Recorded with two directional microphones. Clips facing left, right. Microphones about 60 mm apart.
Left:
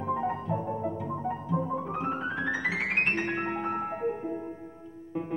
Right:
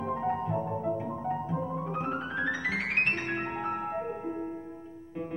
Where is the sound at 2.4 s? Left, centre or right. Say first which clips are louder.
Left 1 dB; centre.